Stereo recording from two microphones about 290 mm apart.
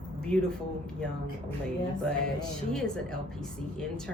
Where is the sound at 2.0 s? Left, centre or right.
Centre.